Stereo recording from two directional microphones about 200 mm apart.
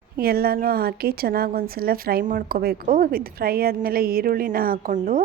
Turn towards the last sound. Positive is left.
turn(degrees=-45)  # may be behind; listen again after turning